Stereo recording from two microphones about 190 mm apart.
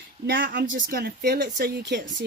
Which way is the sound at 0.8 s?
60° right (ahead or behind).